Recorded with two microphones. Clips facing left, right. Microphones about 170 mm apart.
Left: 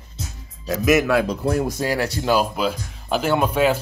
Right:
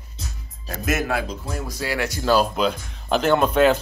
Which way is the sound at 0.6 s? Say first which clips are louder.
Left 7 dB; 90° left.